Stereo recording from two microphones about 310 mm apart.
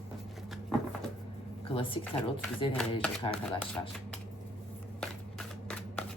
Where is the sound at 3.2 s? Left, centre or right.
Centre.